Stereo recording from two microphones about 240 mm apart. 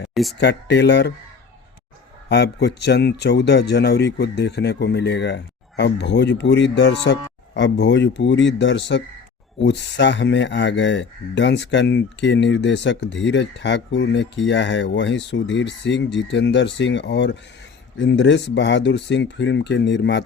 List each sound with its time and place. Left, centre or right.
0.1 s speech: centre
0.3 s speech: left
2.3 s speech: left